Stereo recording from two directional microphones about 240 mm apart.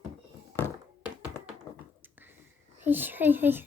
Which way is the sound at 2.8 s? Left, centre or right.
Centre.